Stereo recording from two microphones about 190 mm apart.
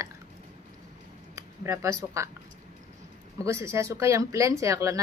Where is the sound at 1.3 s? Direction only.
15° right (ahead or behind).